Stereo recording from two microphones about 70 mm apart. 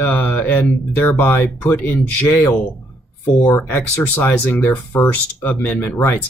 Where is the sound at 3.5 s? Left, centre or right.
Left.